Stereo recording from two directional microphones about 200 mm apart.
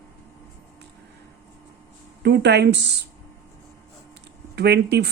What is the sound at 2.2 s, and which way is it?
Speech, 55° right (ahead or behind).